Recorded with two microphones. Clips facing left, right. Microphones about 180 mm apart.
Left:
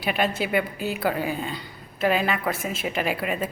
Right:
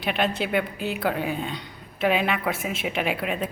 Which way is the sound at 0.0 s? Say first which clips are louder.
Even; 5° left (ahead or behind).